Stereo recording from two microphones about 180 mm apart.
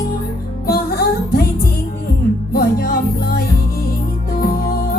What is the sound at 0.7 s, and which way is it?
Music, 55° left (ahead or behind).